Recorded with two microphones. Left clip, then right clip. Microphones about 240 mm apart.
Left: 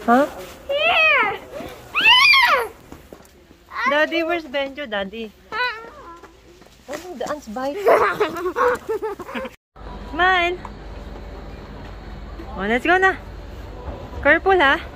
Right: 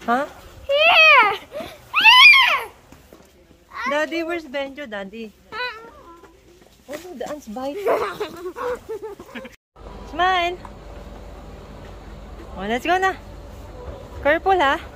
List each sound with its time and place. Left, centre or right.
0.0 s babbling: right
2.2 s a sound: centre
3.9 s speech: centre
5.5 s cat: centre
7.3 s speech: centre
8.0 s a sound: left
8.5 s speech: centre
8.8 s dog: left
10.1 s speech: centre
12.5 s speech: centre
14.2 s speech: centre